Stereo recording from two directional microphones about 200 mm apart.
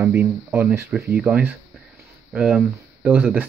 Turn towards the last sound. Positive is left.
turn(degrees=-10)  # may be behind; listen again after turning